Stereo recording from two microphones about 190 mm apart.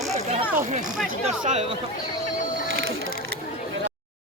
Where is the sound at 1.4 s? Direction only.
35° right (ahead or behind).